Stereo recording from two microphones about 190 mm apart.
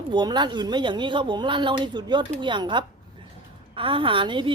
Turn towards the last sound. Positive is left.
turn(degrees=-25)  # may be behind; listen again after turning